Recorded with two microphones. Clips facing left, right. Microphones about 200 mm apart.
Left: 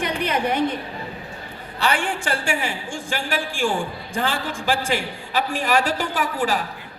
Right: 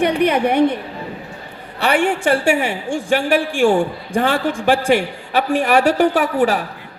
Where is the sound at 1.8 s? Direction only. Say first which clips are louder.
Right 7 dB; 65° right (ahead or behind).